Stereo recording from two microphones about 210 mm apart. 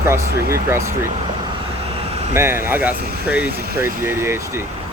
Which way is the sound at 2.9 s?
45° right (ahead or behind).